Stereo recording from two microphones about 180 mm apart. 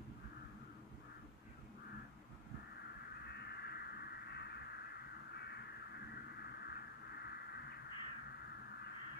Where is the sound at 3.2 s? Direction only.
65° left (ahead or behind).